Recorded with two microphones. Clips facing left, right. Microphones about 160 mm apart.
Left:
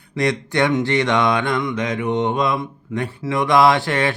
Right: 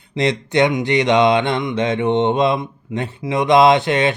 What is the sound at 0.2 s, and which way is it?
Mantra, 20° right (ahead or behind).